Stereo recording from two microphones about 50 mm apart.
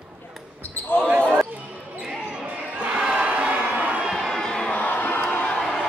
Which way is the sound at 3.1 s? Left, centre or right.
Right.